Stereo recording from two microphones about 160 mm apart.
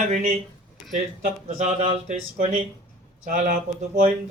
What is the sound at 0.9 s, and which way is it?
Speech, 50° right (ahead or behind).